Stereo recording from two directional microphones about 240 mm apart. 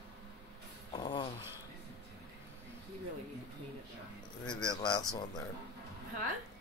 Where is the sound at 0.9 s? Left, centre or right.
Centre.